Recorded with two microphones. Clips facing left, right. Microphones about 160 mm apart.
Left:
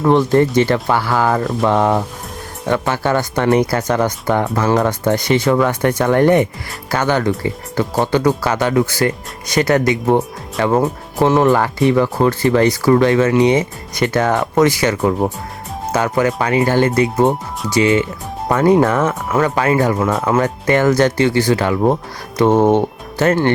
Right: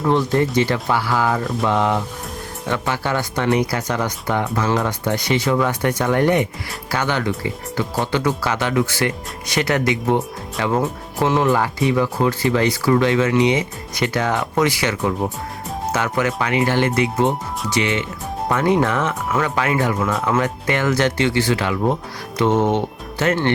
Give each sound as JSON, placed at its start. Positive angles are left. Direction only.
{"t": 0.1, "sound": "speech", "side_deg": 50}